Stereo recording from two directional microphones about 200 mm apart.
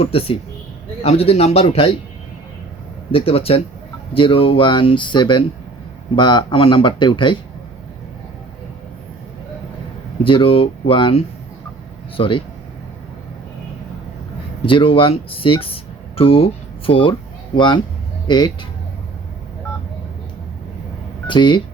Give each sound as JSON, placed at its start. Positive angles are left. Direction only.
{"t": 0.0, "sound": "a man's voice", "side_deg": 30}
{"t": 3.1, "sound": "speech", "side_deg": 30}
{"t": 10.2, "sound": "speech", "side_deg": 25}
{"t": 14.7, "sound": "speech", "side_deg": 25}
{"t": 21.2, "sound": "speech", "side_deg": 25}